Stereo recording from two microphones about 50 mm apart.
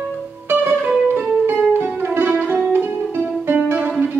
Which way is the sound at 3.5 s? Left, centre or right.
Right.